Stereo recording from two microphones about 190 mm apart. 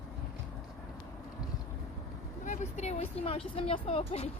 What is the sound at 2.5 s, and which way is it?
Vehicle, 35° left (ahead or behind).